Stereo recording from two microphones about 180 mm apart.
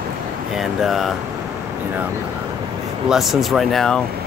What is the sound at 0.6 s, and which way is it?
Speech, centre (ahead or behind).